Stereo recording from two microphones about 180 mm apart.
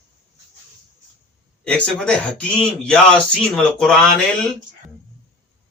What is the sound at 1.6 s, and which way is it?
Speech, 5° left (ahead or behind).